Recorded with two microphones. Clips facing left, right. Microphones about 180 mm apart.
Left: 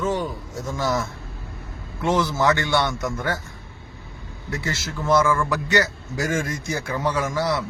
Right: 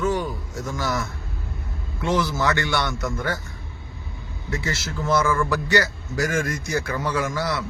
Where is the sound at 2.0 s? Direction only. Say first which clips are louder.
Left 2 dB; 20° left (ahead or behind).